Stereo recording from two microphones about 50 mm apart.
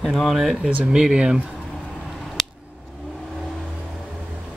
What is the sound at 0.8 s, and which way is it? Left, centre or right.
Speech, centre.